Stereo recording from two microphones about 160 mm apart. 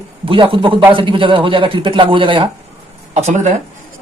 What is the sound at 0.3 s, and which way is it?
Speech, 35° right (ahead or behind).